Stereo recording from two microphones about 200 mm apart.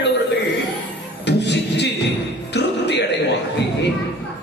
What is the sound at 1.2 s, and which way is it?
Music, 60° left (ahead or behind).